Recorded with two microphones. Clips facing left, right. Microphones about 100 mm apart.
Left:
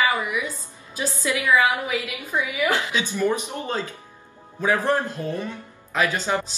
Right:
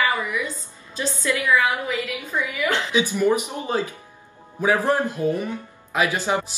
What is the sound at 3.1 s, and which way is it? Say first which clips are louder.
Speech: even; 15° right (ahead or behind).